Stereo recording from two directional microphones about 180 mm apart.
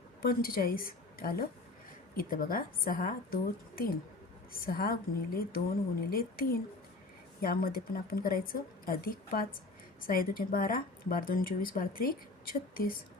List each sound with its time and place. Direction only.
0.2 s a woman's voice: 55° left (ahead or behind)